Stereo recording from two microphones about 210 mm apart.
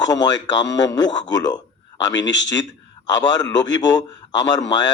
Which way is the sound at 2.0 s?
60° left (ahead or behind).